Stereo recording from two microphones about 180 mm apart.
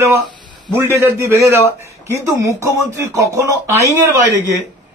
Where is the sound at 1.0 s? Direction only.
15° right (ahead or behind).